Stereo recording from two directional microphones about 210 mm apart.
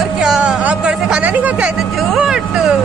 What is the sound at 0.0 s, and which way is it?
Music, centre (ahead or behind).